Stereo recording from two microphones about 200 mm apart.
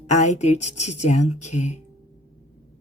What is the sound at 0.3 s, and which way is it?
A woman's voice, 35° left (ahead or behind).